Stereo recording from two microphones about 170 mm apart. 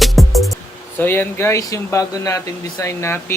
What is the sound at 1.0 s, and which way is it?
Speech, 10° left (ahead or behind).